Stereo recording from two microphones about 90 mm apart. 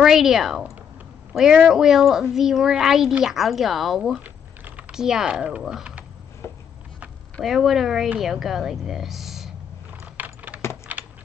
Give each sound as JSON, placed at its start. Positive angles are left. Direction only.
{"t": 0.0, "sound": "a child's voice", "side_deg": -5}
{"t": 4.2, "sound": "typing", "side_deg": -15}
{"t": 4.9, "sound": "speech", "side_deg": -5}
{"t": 6.4, "sound": "a sound", "side_deg": 30}
{"t": 7.4, "sound": "a child's voice", "side_deg": -5}
{"t": 10.1, "sound": "keys jangling", "side_deg": -20}
{"t": 10.9, "sound": "a sound", "side_deg": -20}